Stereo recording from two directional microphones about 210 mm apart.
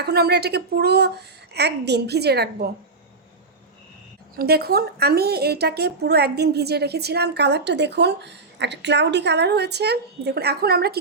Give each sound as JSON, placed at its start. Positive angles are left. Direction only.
{"t": 0.0, "sound": "a woman's voice", "side_deg": -50}
{"t": 4.4, "sound": "a woman's voice", "side_deg": -50}